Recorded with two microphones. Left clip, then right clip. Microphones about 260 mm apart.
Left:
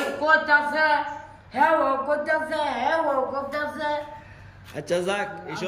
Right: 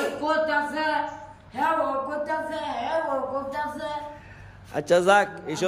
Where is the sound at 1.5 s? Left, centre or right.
Centre.